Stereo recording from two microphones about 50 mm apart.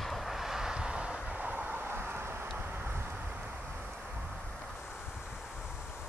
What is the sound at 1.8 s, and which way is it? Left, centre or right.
Vehicle, right.